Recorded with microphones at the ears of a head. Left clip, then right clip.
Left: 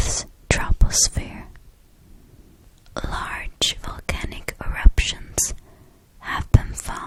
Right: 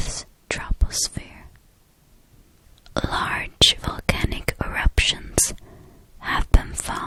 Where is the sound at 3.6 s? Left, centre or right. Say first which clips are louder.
Right 7 dB; right.